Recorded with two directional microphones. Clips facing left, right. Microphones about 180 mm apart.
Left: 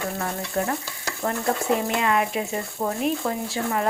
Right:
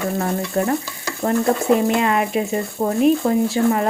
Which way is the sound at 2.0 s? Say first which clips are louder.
Right 4 dB; 25° right (ahead or behind).